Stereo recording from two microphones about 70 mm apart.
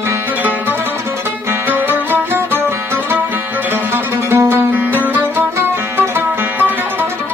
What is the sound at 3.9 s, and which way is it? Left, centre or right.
Music, right.